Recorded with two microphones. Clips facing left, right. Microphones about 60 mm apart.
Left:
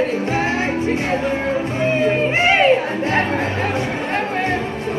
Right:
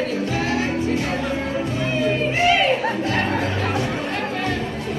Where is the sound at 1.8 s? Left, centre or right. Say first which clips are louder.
Left 5 dB; left.